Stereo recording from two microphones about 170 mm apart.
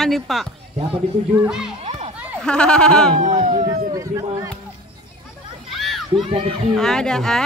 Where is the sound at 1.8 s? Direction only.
40° right (ahead or behind).